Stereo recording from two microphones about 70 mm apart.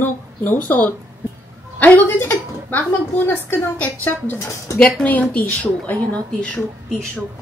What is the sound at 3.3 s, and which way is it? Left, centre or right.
A woman's voice, left.